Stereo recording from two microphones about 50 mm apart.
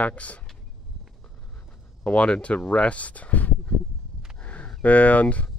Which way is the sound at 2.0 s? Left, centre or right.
Left.